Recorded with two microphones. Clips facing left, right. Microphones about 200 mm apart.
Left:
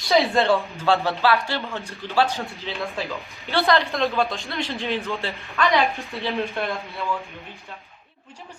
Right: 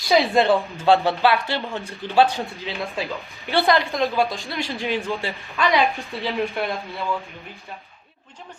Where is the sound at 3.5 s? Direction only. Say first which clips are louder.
Right 1 dB; 15° right (ahead or behind).